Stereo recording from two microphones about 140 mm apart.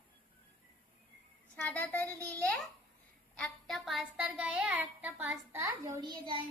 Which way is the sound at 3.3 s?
5° left (ahead or behind).